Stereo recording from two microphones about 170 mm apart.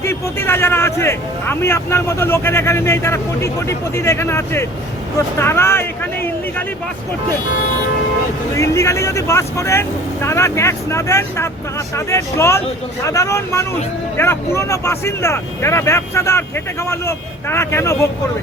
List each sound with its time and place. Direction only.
0.0 s speech: 15° left (ahead or behind)
8.5 s speech: 20° left (ahead or behind)